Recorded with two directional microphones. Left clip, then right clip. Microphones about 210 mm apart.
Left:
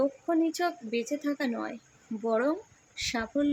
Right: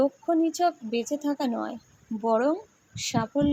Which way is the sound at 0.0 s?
5° right (ahead or behind).